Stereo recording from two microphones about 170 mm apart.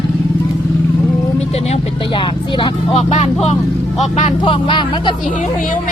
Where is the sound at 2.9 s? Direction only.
40° left (ahead or behind).